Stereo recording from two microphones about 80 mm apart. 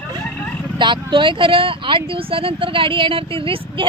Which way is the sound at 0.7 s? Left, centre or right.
Right.